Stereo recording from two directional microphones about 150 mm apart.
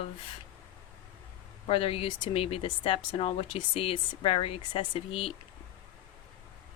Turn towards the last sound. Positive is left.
turn(degrees=35)  # may be behind; listen again after turning